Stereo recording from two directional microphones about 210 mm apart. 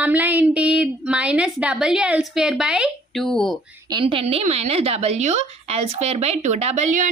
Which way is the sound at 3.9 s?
25° right (ahead or behind).